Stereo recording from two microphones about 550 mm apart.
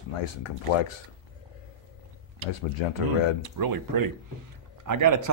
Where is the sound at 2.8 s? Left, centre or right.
Left.